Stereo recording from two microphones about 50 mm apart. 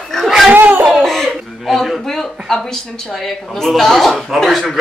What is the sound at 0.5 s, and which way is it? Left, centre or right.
Laughter, right.